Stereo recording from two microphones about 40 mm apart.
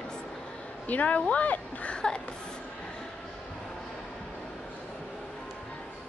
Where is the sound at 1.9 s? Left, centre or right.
Left.